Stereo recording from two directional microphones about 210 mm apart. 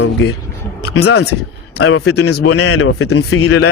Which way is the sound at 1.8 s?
75° left (ahead or behind).